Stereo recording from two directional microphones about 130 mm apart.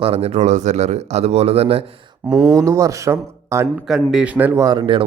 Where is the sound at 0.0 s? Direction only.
50° right (ahead or behind).